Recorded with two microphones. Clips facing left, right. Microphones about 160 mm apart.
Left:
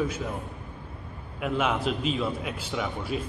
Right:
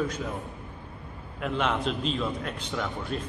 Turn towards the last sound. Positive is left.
turn(degrees=5)  # may be behind; listen again after turning